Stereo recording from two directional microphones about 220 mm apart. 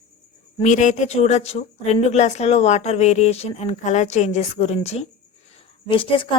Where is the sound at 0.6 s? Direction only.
35° left (ahead or behind).